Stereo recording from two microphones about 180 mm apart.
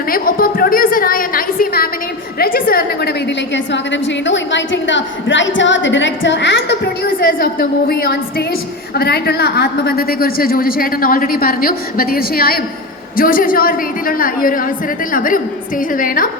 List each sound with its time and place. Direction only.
0.1 s a woman's voice: 55° left (ahead or behind)